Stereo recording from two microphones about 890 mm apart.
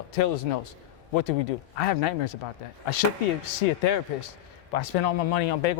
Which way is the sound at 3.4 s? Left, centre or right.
Left.